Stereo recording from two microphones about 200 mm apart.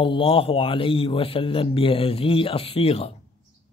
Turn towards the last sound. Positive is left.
turn(degrees=30)  # may be behind; listen again after turning